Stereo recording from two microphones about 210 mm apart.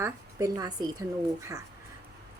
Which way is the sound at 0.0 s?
15° right (ahead or behind).